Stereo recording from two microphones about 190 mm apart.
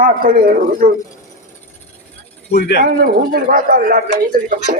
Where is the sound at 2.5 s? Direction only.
60° left (ahead or behind).